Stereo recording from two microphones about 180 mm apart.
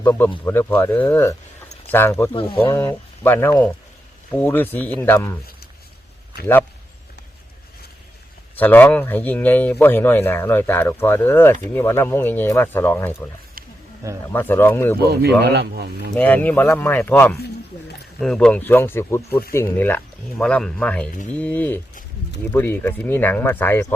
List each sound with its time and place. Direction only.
0.0 s speech: 10° left (ahead or behind)
2.3 s speech: 30° left (ahead or behind)
2.6 s speech: 15° left (ahead or behind)
8.5 s speech: 10° left (ahead or behind)
13.6 s wild animals: 55° right (ahead or behind)
14.3 s speech: 10° left (ahead or behind)
15.0 s speech: 65° right (ahead or behind)
16.1 s speech: 10° left (ahead or behind)